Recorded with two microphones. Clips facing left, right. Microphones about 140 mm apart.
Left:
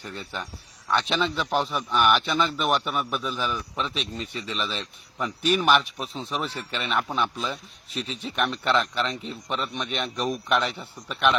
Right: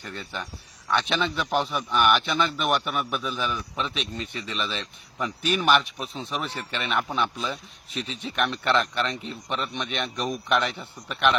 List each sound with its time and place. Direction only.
0.0 s a man's voice: 5° left (ahead or behind)